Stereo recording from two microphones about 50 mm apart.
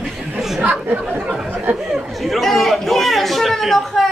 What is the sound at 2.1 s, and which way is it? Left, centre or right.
A man's voice, centre.